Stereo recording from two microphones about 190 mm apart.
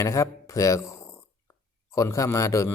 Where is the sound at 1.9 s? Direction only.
15° left (ahead or behind).